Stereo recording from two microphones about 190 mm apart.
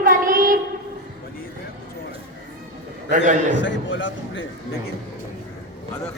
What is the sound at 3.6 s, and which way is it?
Speech, 75° left (ahead or behind).